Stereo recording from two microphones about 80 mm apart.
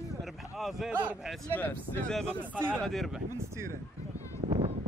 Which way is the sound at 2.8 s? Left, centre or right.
Centre.